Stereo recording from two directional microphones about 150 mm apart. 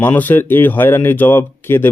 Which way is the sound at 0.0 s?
10° left (ahead or behind).